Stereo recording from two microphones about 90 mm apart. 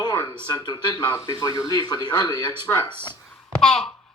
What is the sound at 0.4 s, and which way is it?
Speech, 50° left (ahead or behind).